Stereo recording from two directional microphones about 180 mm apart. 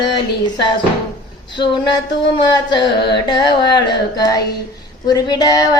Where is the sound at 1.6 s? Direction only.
25° left (ahead or behind).